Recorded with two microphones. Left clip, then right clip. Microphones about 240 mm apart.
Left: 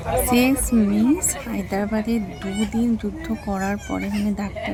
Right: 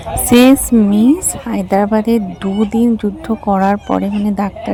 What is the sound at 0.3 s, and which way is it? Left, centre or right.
A woman's voice, right.